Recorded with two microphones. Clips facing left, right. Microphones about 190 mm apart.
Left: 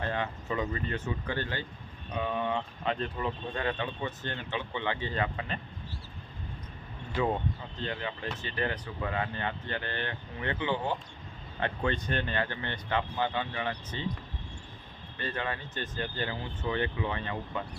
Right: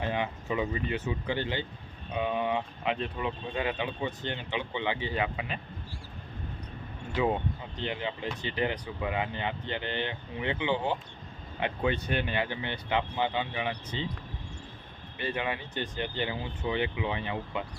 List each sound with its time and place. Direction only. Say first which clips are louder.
0.0 s speech: right 2 dB; 10° right (ahead or behind)
7.2 s speech: right 1 dB; 15° right (ahead or behind)
15.2 s speech: right 2 dB; 10° right (ahead or behind)